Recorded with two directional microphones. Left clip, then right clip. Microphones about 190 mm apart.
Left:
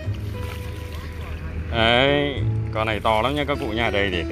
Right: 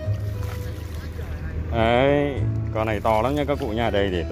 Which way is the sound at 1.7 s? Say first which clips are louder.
Left 1 dB; 5° right (ahead or behind).